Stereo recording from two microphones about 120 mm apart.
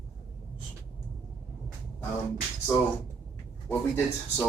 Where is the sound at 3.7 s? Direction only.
15° left (ahead or behind).